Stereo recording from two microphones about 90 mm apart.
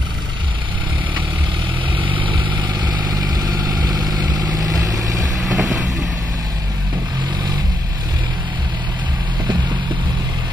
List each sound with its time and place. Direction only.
2.0 s vehicle: 70° right (ahead or behind); by 5.2 s 40° right (ahead or behind)
5.4 s vehicle: centre (ahead or behind)